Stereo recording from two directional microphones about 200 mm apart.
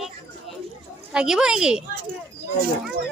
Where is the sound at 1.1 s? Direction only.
5° right (ahead or behind).